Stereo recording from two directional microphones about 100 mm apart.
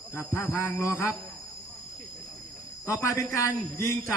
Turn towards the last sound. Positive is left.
turn(degrees=25)  # may be behind; listen again after turning